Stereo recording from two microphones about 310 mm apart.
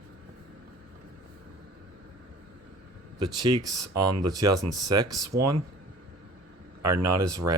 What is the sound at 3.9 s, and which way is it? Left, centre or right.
Speech, right.